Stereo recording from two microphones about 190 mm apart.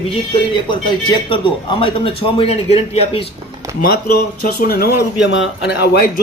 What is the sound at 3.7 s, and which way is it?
Speech, 50° left (ahead or behind).